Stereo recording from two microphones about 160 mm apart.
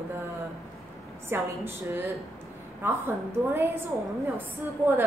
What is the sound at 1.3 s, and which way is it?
A woman's voice, 15° right (ahead or behind).